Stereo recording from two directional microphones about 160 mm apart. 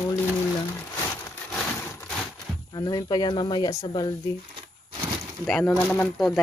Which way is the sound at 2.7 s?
25° left (ahead or behind).